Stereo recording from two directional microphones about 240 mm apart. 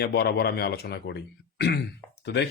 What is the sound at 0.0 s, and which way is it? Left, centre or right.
Speech, left.